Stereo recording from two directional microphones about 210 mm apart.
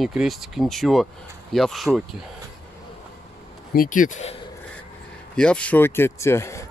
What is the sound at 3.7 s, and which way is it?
Speech, 40° left (ahead or behind).